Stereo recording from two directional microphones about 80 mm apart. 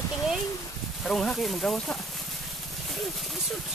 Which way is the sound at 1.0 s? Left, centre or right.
Centre.